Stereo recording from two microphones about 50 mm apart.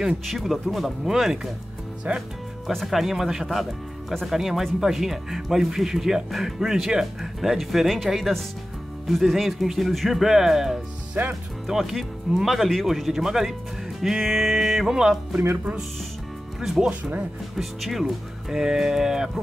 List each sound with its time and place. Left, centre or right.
0.3 s speech: centre
2.1 s speech: right
2.7 s speech: centre
11.2 s speech: right
11.6 s speech: centre
16.6 s speech: centre